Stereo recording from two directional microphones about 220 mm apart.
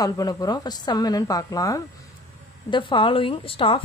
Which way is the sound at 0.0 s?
15° left (ahead or behind).